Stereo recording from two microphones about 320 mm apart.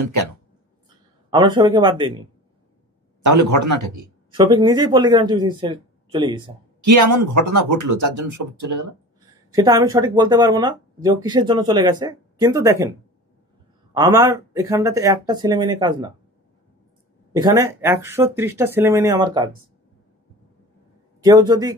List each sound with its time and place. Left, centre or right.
0.0 s speech: right
1.3 s speech: centre
3.3 s speech: right
4.3 s speech: centre
6.8 s speech: right
9.3 s speech: centre
13.9 s speech: centre
17.4 s speech: centre
21.2 s speech: centre